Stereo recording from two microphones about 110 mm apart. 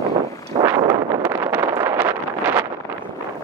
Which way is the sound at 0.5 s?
45° right (ahead or behind).